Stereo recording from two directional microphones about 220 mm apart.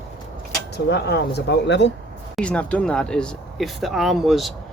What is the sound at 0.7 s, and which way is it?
Speech, 50° left (ahead or behind).